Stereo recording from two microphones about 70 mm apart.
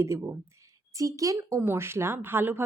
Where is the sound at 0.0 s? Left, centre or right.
Right.